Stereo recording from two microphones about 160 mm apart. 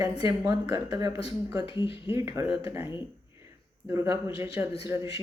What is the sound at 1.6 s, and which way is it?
Speech, 30° left (ahead or behind).